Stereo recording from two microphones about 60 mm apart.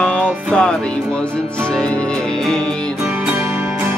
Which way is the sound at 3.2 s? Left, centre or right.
Right.